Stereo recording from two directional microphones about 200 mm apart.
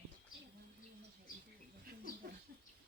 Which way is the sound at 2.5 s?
45° right (ahead or behind).